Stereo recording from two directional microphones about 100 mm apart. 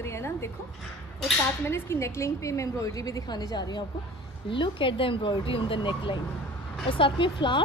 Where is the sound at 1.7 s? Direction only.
25° left (ahead or behind).